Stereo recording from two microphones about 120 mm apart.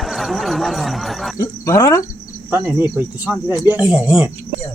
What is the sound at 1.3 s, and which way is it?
Speech, 25° left (ahead or behind).